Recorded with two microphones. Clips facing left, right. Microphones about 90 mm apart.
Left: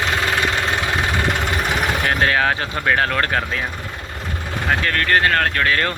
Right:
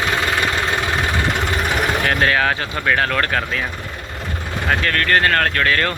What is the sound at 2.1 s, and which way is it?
Speech, 20° left (ahead or behind).